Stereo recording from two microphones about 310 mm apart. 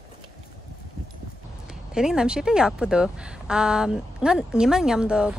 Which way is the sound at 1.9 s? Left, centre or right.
Centre.